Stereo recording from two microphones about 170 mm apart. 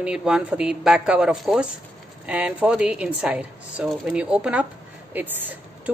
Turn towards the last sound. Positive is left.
turn(degrees=-10)  # may be behind; listen again after turning